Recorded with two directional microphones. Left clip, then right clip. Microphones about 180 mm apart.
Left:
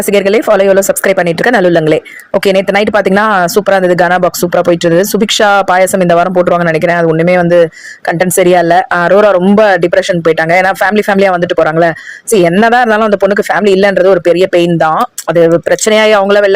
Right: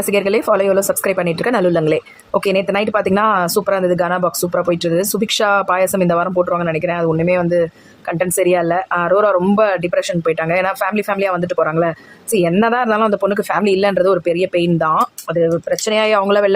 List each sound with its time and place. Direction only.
0.1 s speech: 25° left (ahead or behind)